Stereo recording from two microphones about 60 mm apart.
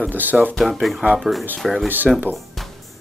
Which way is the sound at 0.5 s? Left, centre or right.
Centre.